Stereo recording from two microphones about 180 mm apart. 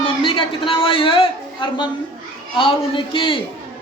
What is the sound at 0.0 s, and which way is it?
A man's voice, 30° left (ahead or behind).